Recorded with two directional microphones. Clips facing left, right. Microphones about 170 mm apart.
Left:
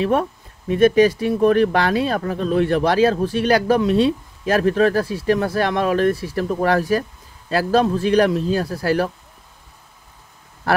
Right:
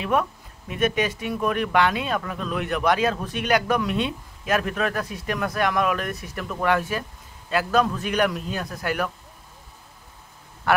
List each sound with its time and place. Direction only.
0.0 s speech: 35° left (ahead or behind)